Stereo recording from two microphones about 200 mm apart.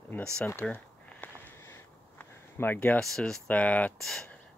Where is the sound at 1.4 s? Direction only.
10° left (ahead or behind).